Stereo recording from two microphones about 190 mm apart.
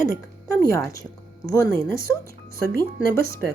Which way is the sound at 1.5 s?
15° left (ahead or behind).